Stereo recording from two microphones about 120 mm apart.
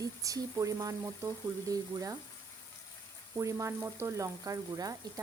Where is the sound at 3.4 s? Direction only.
25° right (ahead or behind).